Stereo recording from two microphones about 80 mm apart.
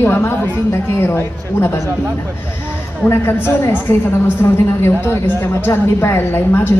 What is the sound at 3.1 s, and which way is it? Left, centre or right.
A woman's voice, left.